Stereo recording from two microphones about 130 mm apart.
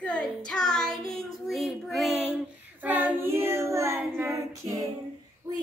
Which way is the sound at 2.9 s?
15° right (ahead or behind).